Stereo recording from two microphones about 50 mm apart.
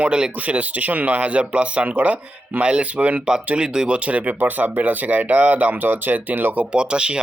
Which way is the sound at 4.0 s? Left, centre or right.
Right.